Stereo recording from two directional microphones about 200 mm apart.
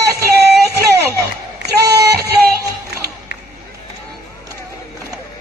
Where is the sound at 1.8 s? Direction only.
55° right (ahead or behind).